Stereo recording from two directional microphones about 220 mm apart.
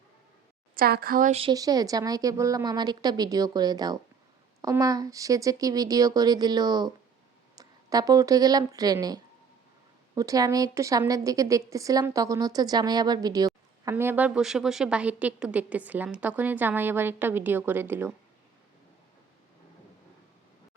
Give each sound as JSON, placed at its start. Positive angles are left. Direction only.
{"t": 0.8, "sound": "a woman's voice", "side_deg": -45}